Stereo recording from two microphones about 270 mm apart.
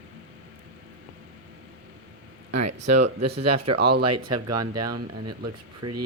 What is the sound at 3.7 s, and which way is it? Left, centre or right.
Speech, right.